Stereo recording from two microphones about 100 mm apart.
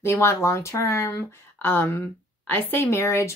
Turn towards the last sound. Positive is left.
turn(degrees=25)  # may be behind; listen again after turning